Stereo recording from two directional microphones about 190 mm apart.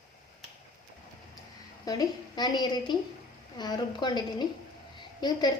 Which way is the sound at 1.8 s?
20° left (ahead or behind).